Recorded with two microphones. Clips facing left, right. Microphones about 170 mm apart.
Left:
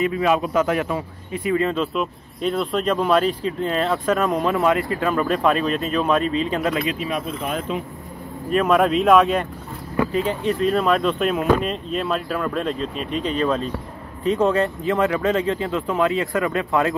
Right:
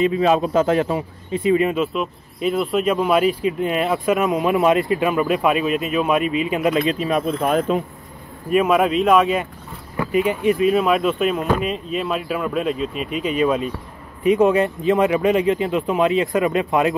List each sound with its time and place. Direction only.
0.0 s a man's voice: 25° right (ahead or behind)
2.0 s speech: 5° right (ahead or behind)
6.9 s speech: 40° right (ahead or behind)
8.5 s speech: 10° right (ahead or behind)
10.1 s speech: 15° right (ahead or behind)